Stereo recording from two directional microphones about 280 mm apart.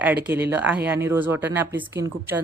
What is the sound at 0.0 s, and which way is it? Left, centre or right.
Speech, centre.